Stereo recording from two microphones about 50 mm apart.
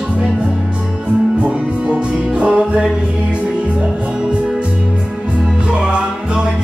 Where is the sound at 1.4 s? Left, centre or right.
Right.